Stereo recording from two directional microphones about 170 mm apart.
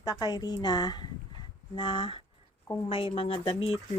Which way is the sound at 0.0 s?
20° left (ahead or behind).